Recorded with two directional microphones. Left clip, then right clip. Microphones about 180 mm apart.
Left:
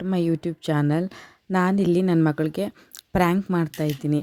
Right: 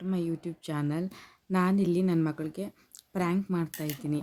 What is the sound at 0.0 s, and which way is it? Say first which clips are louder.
A woman's voice: left 9 dB; 45° left (ahead or behind).